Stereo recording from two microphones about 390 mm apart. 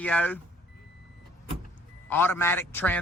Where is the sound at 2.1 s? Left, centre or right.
Centre.